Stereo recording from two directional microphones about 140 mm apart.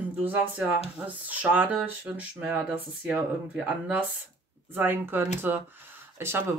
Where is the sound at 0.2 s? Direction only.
10° right (ahead or behind).